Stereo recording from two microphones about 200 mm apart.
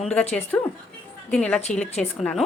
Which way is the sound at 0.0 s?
5° left (ahead or behind).